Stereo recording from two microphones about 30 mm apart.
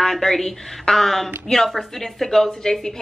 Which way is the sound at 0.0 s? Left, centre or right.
Centre.